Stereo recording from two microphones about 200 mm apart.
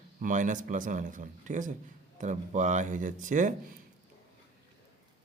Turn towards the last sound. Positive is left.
turn(degrees=-40)  # may be behind; listen again after turning